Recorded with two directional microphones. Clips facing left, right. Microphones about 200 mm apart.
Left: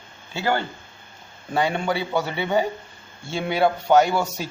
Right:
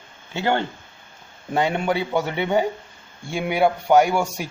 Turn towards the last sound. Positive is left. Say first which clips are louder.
# right 1 dB
turn(degrees=-15)  # may be behind; listen again after turning